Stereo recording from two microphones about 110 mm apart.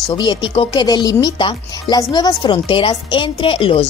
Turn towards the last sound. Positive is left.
turn(degrees=50)  # may be behind; listen again after turning